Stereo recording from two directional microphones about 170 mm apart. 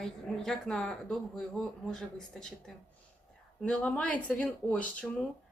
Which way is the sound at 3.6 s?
5° left (ahead or behind).